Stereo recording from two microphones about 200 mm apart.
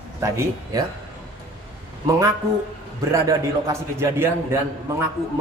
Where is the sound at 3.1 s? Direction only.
15° right (ahead or behind).